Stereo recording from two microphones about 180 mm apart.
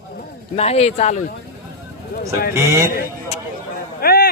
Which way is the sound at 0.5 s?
35° left (ahead or behind).